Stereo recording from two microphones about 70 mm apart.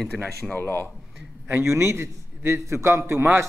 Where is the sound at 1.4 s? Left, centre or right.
Right.